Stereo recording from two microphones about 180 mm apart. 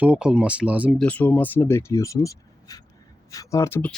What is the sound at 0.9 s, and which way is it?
Speech, 10° left (ahead or behind).